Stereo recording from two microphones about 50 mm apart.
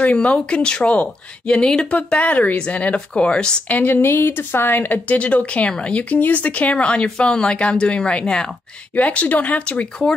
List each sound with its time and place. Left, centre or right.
0.0 s speech: left
3.6 s speech: left